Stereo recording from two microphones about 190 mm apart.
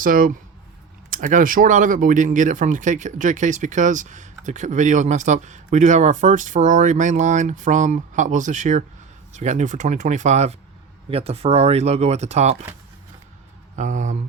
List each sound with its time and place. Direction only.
0.0 s speech: 45° right (ahead or behind)
13.7 s speech: 40° right (ahead or behind)